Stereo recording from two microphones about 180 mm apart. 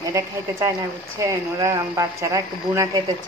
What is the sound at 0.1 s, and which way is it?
Speech, 20° right (ahead or behind).